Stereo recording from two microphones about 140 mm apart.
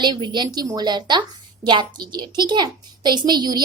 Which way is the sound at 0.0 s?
30° right (ahead or behind).